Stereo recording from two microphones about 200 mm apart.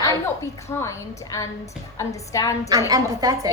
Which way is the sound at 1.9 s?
15° left (ahead or behind).